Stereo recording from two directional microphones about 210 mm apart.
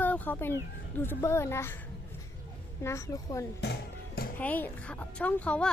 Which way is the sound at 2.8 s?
15° left (ahead or behind).